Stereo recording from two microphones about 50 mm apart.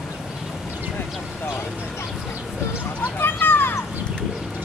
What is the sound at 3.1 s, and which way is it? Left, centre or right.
Vehicle, left.